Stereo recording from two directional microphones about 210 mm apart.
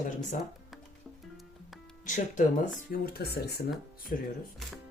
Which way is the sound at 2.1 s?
35° left (ahead or behind).